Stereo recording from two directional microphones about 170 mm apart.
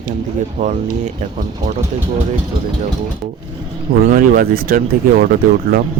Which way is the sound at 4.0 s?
55° right (ahead or behind).